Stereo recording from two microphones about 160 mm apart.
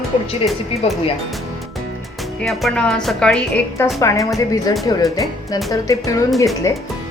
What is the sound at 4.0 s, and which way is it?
Speech, 20° left (ahead or behind).